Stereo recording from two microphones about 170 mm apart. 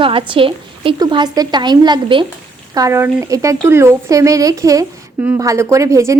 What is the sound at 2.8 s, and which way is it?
A woman's voice, 15° right (ahead or behind).